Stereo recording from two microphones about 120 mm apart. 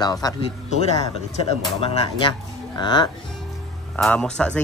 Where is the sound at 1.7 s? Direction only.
50° left (ahead or behind).